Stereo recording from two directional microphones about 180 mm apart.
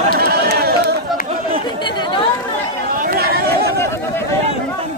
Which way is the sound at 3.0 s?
55° right (ahead or behind).